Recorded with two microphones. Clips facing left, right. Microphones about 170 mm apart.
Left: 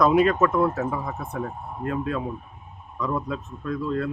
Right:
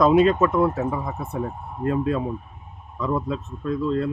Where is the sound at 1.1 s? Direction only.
25° right (ahead or behind).